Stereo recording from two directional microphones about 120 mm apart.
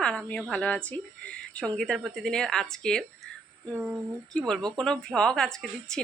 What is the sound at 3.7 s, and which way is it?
Speech, 10° right (ahead or behind).